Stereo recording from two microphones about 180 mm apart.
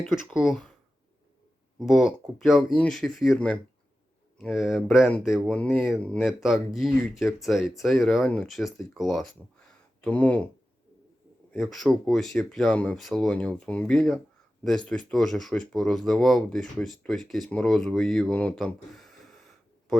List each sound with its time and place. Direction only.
0.3 s speech: centre (ahead or behind)
1.8 s speech: centre (ahead or behind)
11.5 s speech: centre (ahead or behind)